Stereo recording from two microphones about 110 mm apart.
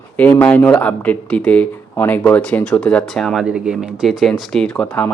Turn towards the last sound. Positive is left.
turn(degrees=10)  # may be behind; listen again after turning